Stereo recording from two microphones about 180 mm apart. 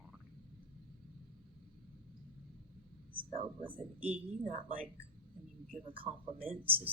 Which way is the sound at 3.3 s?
30° right (ahead or behind).